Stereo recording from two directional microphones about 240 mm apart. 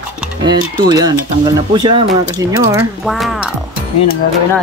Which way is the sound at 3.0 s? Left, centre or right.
Centre.